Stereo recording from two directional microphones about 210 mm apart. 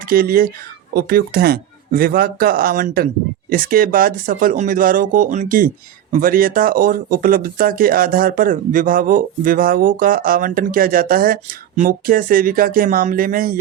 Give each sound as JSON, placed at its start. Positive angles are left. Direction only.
{"t": 0.1, "sound": "speech", "side_deg": -45}